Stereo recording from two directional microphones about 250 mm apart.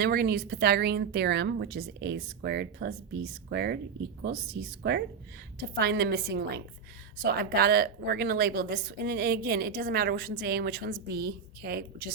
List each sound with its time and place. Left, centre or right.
0.0 s a woman's voice: right